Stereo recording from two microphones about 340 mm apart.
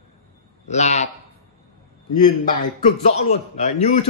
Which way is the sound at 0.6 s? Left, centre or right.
Centre.